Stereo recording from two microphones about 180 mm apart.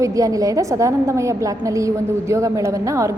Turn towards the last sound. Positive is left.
turn(degrees=-15)  # may be behind; listen again after turning